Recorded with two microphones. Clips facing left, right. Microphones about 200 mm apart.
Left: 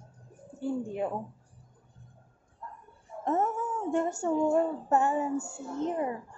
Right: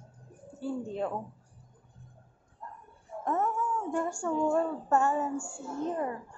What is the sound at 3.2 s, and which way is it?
A woman's voice, 25° left (ahead or behind).